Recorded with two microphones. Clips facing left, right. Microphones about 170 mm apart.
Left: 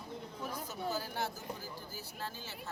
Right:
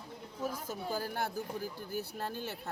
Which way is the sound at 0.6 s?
50° right (ahead or behind).